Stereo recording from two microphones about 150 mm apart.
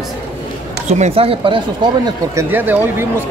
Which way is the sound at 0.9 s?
45° right (ahead or behind).